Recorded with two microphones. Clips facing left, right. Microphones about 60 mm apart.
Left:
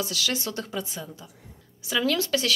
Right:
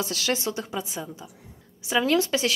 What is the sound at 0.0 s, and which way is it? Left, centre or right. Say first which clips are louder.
Speech: right 2 dB; right.